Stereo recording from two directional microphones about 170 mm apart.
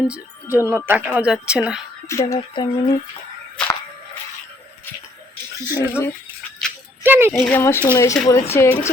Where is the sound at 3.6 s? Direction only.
5° left (ahead or behind).